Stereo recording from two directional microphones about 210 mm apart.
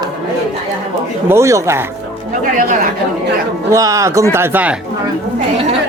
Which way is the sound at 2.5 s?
35° right (ahead or behind).